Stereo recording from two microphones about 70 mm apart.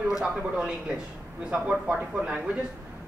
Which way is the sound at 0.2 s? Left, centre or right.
Centre.